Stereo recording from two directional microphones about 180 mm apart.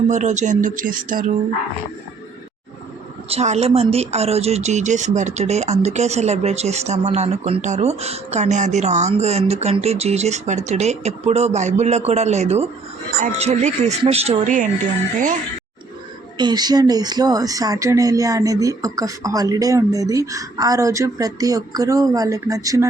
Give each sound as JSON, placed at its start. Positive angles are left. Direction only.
{"t": 0.1, "sound": "speech", "side_deg": -40}
{"t": 3.2, "sound": "speech", "side_deg": -35}
{"t": 16.4, "sound": "speech", "side_deg": -25}